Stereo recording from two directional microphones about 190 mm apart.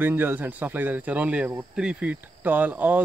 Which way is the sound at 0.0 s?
10° right (ahead or behind).